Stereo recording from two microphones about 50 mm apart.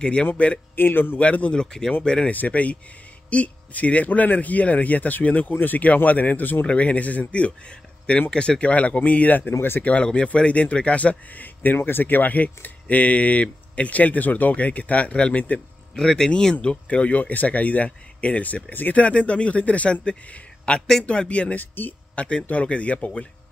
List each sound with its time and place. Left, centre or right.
0.0 s speech: left
0.7 s a man's voice: left
1.2 s speech: left
1.5 s speech: centre
2.3 s speech: left
6.6 s speech: left
9.5 s a man's voice: left
9.8 s speech: left
15.9 s speech: centre
16.5 s speech: left
21.5 s speech: left
22.1 s speech: left